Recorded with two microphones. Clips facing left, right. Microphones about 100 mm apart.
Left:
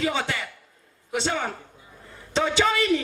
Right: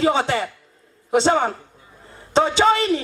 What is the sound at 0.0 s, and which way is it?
Speech, 35° right (ahead or behind).